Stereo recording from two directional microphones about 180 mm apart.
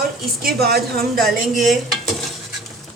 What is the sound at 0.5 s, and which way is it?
Speech, 60° right (ahead or behind).